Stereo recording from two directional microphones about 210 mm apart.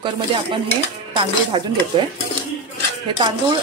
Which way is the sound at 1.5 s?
20° right (ahead or behind).